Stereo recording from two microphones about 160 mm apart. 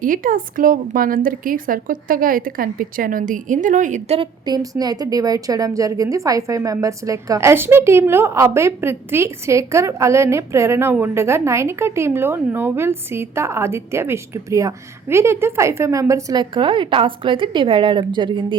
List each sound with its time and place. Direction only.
0.0 s a woman's voice: 60° right (ahead or behind)
4.2 s a woman's voice: 25° right (ahead or behind)